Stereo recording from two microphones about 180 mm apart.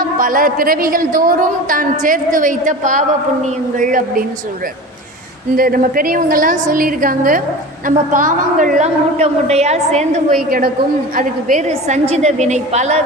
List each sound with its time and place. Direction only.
0.2 s a woman's voice: 50° right (ahead or behind)
5.5 s a woman's voice: 55° right (ahead or behind)
11.7 s a woman's voice: 35° right (ahead or behind)